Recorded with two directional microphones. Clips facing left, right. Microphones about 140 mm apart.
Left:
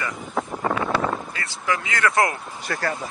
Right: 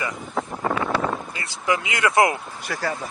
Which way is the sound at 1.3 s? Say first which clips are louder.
Right 2 dB; 20° right (ahead or behind).